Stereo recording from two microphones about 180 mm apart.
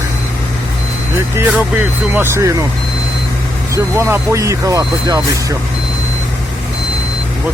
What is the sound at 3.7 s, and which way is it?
Speech, 15° right (ahead or behind).